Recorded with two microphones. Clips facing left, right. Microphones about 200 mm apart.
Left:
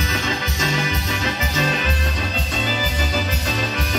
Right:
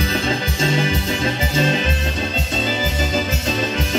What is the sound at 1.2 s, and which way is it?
Music, 30° right (ahead or behind).